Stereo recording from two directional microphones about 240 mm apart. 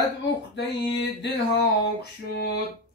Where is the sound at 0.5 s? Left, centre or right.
Left.